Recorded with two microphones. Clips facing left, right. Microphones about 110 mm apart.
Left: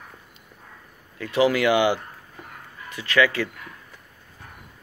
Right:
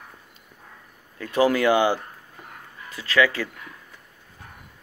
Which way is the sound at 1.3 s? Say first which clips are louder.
Even; 40° right (ahead or behind).